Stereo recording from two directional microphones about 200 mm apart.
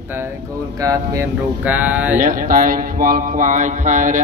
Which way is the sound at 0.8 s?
15° right (ahead or behind).